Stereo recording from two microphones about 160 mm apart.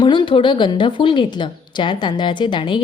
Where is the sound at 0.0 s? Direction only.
30° left (ahead or behind).